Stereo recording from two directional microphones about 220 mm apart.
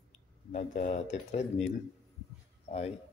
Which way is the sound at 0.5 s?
30° left (ahead or behind).